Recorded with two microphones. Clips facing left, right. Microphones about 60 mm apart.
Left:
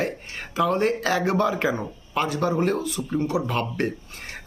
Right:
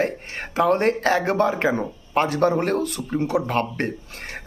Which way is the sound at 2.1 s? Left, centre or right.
Right.